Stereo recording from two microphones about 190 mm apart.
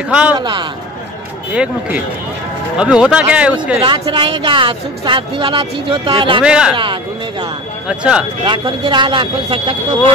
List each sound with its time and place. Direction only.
0.1 s speech: 5° right (ahead or behind)
0.4 s speech: 25° right (ahead or behind)
1.5 s speech: 5° right (ahead or behind)
3.8 s speech: 25° right (ahead or behind)
6.4 s speech: 5° right (ahead or behind)
6.8 s speech: 25° right (ahead or behind)
7.9 s speech: 5° right (ahead or behind)
8.5 s speech: 25° right (ahead or behind)